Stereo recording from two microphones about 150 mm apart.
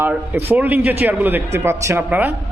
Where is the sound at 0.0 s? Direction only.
15° right (ahead or behind).